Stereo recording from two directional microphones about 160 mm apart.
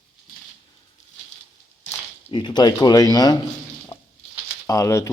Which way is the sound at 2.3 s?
30° left (ahead or behind).